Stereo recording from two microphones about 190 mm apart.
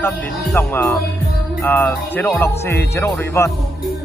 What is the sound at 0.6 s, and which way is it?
Speech, 10° left (ahead or behind).